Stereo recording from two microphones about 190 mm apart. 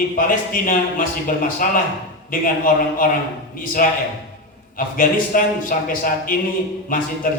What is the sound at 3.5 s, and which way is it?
Speech, 45° left (ahead or behind).